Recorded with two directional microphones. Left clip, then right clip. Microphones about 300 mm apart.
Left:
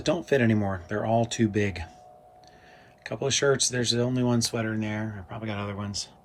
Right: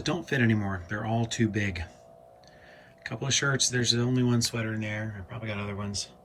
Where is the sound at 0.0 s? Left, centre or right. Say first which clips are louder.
Left 4 dB; centre.